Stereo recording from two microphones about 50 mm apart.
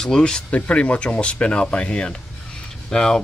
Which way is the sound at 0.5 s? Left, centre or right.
Left.